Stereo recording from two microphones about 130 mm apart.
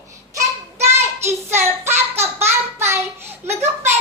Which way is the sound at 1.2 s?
20° right (ahead or behind).